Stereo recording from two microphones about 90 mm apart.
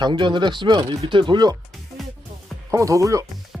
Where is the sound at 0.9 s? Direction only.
75° right (ahead or behind); by 1.6 s 55° right (ahead or behind).